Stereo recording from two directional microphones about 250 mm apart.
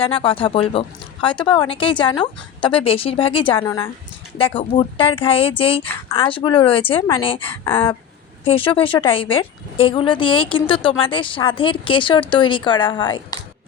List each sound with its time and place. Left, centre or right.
0.0 s a woman's voice: left